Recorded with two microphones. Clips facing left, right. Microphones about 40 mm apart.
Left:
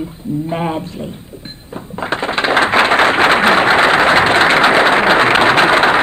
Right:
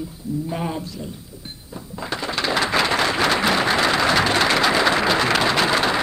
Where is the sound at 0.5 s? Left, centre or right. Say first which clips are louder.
Left 9 dB; left.